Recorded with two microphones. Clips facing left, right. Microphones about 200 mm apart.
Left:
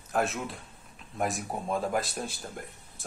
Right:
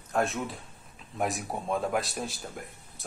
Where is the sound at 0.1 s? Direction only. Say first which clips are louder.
Right 1 dB; centre (ahead or behind).